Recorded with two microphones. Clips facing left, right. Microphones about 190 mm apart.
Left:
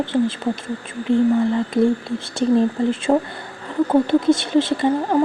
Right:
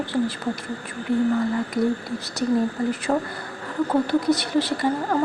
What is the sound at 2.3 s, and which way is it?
Speech, 25° left (ahead or behind).